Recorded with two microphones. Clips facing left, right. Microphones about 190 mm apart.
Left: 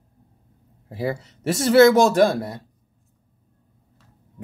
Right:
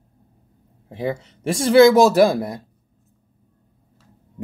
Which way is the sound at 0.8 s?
5° left (ahead or behind).